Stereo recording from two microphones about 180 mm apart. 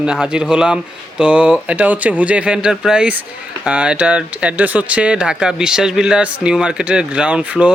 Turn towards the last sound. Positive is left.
turn(degrees=-5)  # may be behind; listen again after turning